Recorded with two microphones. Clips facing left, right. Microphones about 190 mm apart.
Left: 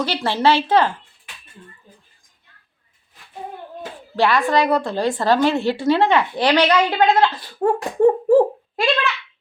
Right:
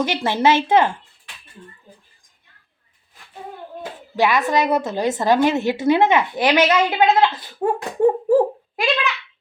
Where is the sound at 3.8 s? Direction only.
15° right (ahead or behind).